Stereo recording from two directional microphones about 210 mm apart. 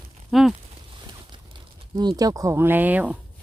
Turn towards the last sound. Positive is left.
turn(degrees=-5)  # may be behind; listen again after turning